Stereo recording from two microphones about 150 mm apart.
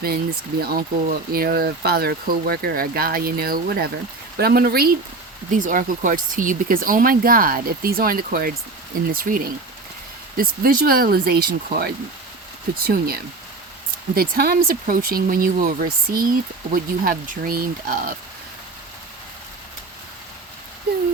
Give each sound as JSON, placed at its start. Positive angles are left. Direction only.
{"t": 0.6, "sound": "speech", "side_deg": -85}
{"t": 5.5, "sound": "speech", "side_deg": -60}